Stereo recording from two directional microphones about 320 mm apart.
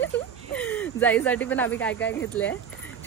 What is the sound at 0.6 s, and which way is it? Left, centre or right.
Speech, centre.